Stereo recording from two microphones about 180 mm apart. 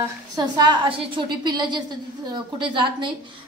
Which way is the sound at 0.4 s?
25° right (ahead or behind).